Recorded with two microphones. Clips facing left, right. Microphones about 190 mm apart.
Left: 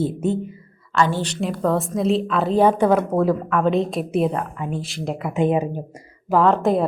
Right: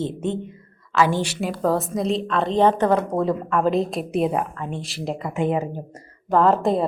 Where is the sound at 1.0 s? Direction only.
10° right (ahead or behind).